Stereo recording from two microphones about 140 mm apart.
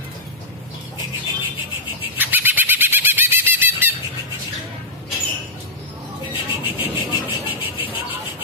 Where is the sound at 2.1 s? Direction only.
15° right (ahead or behind).